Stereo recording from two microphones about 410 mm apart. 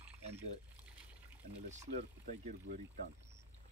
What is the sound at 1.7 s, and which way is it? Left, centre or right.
Speech, centre.